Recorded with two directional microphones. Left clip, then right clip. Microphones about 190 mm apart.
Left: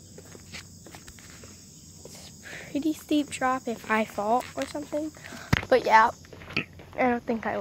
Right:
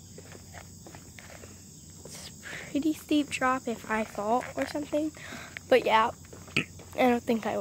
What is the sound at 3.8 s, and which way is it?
Cricket, 20° left (ahead or behind).